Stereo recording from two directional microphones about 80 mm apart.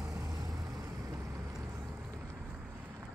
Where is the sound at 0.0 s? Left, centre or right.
Right.